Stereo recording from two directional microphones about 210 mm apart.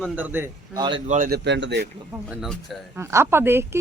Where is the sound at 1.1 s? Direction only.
40° right (ahead or behind).